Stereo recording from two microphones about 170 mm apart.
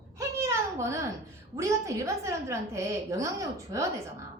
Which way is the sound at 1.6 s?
20° right (ahead or behind).